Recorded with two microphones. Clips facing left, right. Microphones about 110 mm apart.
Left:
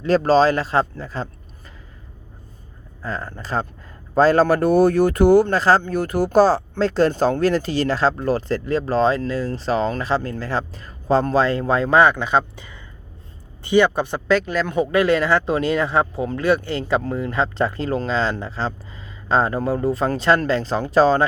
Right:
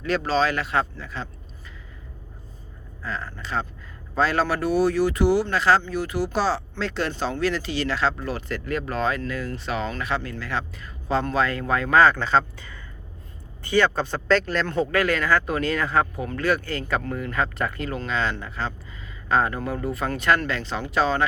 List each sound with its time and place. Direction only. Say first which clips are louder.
0.2 s speech: left 8 dB; 40° left (ahead or behind)
3.0 s speech: left 4 dB; 40° left (ahead or behind)